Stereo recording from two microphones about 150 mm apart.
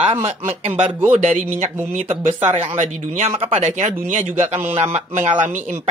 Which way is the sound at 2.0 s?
40° right (ahead or behind).